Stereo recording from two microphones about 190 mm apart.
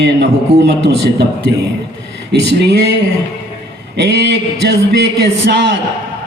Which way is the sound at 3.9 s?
65° right (ahead or behind).